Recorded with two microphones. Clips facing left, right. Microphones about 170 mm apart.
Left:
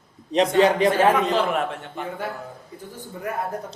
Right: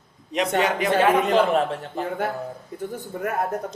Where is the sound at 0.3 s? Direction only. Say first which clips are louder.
Left 5 dB; 35° left (ahead or behind).